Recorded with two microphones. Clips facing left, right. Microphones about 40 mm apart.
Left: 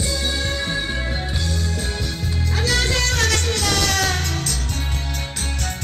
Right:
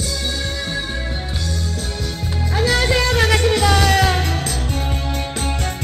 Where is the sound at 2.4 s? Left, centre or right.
Centre.